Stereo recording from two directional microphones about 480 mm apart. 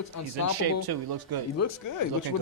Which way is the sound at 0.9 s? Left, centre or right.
Right.